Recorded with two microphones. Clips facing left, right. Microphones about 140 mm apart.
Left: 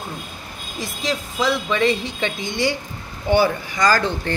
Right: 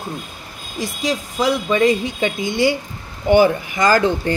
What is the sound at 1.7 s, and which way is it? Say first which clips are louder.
A woman's voice: right 4 dB; 10° right (ahead or behind).